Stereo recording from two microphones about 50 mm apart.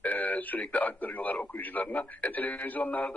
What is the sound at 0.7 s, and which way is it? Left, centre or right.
A man's voice, left.